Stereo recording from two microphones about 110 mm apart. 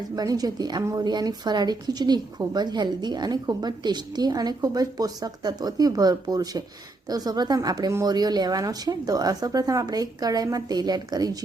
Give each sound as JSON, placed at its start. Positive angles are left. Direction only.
{"t": 0.2, "sound": "a woman's voice", "side_deg": -35}